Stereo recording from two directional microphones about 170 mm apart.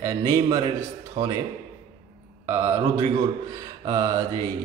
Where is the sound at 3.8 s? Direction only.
20° right (ahead or behind).